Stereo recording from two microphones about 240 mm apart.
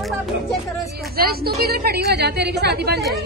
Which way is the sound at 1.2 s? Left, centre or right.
Right.